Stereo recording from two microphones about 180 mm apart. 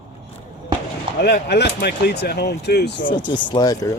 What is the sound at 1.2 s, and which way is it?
Speech, 65° left (ahead or behind).